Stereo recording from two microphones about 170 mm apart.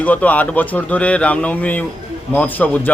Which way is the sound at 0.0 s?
10° left (ahead or behind).